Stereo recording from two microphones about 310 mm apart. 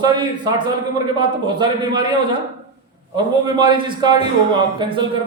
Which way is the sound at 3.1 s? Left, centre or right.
Centre.